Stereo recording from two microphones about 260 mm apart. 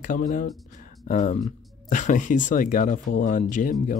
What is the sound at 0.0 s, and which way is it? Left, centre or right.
Speech, left.